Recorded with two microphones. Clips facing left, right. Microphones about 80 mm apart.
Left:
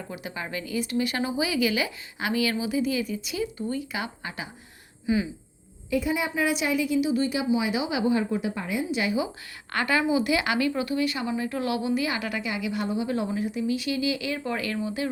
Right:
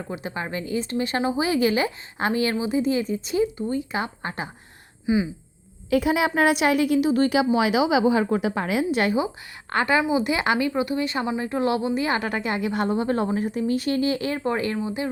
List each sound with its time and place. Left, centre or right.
0.1 s speech: right
3.9 s speech: right
5.0 s speech: right
5.9 s a woman's voice: right
8.9 s speech: right
9.7 s speech: right